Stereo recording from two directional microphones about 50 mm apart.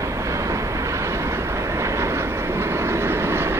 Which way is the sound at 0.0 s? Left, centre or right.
Right.